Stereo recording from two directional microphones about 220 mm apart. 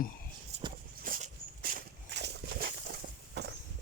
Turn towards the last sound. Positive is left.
turn(degrees=-50)  # may be behind; listen again after turning